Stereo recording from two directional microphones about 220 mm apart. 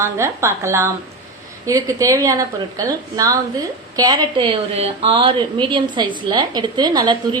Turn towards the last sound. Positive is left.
turn(degrees=-20)  # may be behind; listen again after turning